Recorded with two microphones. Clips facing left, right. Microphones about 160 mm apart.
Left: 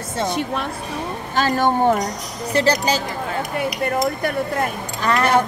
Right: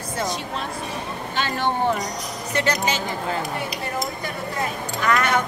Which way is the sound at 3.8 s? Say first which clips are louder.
Left 8 dB; 60° left (ahead or behind).